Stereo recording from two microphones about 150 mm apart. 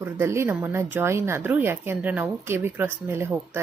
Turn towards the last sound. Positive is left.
turn(degrees=-15)  # may be behind; listen again after turning